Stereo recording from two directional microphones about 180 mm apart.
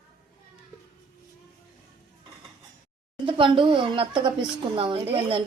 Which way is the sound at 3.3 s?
25° right (ahead or behind).